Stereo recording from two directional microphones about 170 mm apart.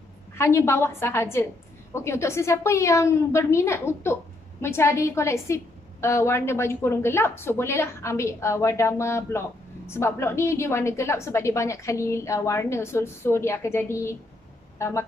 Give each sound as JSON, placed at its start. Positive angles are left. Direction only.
{"t": 0.4, "sound": "a woman's voice", "side_deg": 15}